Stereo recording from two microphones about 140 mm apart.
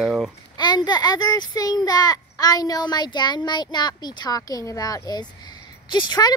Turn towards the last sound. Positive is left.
turn(degrees=30)  # may be behind; listen again after turning